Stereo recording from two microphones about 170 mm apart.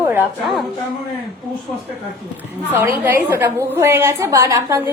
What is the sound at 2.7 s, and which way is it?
A woman's voice, 10° right (ahead or behind).